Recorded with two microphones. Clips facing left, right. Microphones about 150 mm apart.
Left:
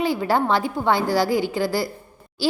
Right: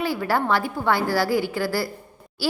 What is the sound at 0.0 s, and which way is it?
Speech, 20° left (ahead or behind).